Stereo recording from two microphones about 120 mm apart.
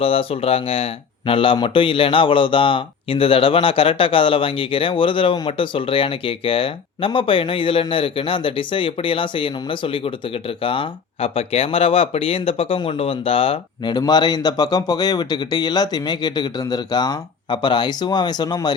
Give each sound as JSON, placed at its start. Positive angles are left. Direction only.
{"t": 0.0, "sound": "speech", "side_deg": 50}
{"t": 13.9, "sound": "speech", "side_deg": 35}